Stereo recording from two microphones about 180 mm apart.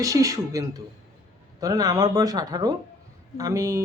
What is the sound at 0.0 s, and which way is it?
Speech, 20° right (ahead or behind).